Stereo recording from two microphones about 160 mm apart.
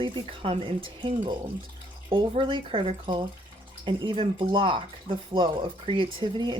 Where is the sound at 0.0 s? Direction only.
35° right (ahead or behind).